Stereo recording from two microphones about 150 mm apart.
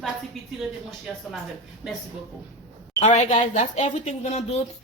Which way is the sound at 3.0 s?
50° left (ahead or behind).